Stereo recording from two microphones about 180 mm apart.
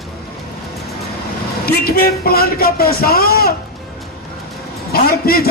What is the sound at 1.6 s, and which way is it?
Music, 55° left (ahead or behind).